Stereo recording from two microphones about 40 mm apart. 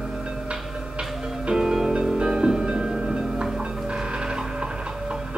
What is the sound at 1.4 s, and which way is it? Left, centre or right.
Music, centre.